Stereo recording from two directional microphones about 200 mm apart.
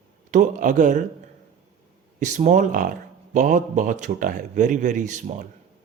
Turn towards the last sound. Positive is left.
turn(degrees=-40)  # may be behind; listen again after turning